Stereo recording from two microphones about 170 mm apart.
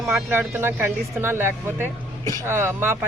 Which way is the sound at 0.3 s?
15° right (ahead or behind).